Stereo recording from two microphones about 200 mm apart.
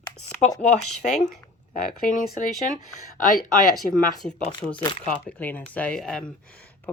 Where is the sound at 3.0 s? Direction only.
40° left (ahead or behind).